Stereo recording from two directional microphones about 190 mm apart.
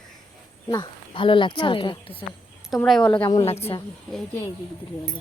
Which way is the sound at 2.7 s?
Centre (ahead or behind).